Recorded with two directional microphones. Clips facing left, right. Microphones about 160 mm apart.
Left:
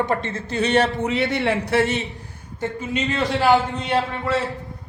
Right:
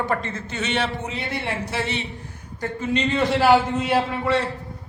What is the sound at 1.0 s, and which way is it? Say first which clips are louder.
Speech: left 7 dB; 75° left (ahead or behind).